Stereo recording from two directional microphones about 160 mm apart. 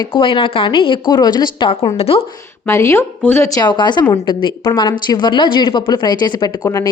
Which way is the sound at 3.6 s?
25° left (ahead or behind).